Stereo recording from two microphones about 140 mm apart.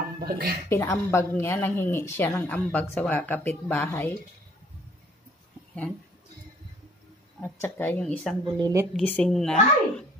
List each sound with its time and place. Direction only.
0.2 s speech: 90° right
0.7 s speech: 20° left (ahead or behind)
7.3 s speech: 15° left (ahead or behind)
8.5 s a woman's voice: 30° right (ahead or behind)
8.9 s speech: 10° left (ahead or behind)